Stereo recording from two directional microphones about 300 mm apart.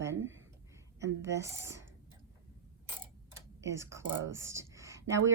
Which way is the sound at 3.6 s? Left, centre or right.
Centre.